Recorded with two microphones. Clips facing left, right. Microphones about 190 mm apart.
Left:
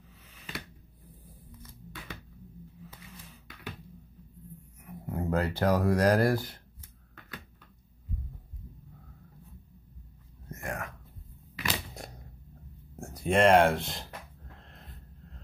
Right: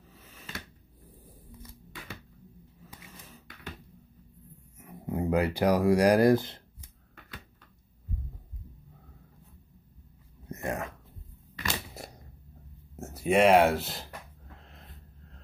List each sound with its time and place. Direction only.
4.8 s speech: 15° right (ahead or behind)
10.5 s whispering: 20° right (ahead or behind)
11.5 s crunch: centre (ahead or behind)
12.9 s speech: 5° right (ahead or behind)
14.5 s snort: centre (ahead or behind)